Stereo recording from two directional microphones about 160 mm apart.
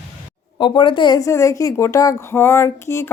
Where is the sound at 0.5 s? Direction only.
30° left (ahead or behind).